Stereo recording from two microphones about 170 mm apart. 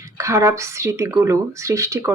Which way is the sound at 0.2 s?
15° right (ahead or behind).